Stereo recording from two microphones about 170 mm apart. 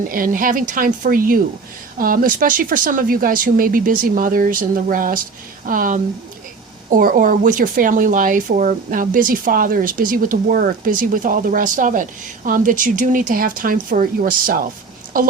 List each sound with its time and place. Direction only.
0.1 s speech: 55° right (ahead or behind)